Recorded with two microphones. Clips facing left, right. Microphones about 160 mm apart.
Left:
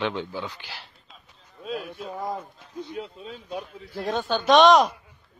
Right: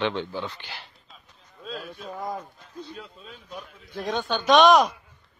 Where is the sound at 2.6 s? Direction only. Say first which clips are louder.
Left 5 dB; 20° left (ahead or behind).